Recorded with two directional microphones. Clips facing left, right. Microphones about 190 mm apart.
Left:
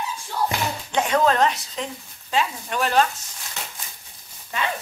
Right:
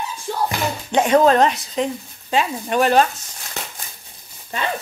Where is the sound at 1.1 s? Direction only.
20° right (ahead or behind).